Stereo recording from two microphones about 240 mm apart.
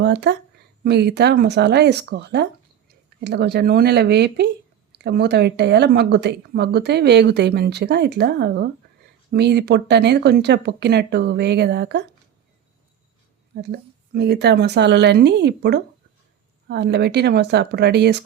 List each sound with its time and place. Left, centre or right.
0.0 s speech: right
13.6 s speech: right